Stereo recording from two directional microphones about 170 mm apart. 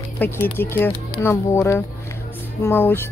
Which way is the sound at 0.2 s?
10° left (ahead or behind).